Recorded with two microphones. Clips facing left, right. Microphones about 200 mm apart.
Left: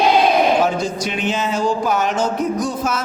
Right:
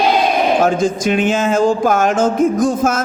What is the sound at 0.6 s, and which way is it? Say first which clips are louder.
Speech: right 4 dB; 50° right (ahead or behind).